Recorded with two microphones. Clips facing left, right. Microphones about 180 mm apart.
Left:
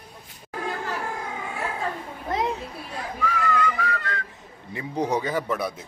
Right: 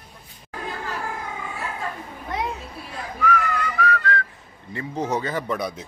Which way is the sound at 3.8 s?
20° left (ahead or behind).